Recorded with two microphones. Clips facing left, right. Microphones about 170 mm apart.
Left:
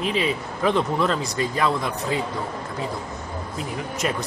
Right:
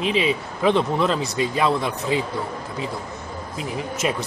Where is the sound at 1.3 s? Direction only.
20° right (ahead or behind).